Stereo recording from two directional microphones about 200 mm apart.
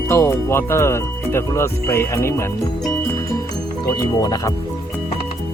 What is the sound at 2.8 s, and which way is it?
Music, 5° left (ahead or behind).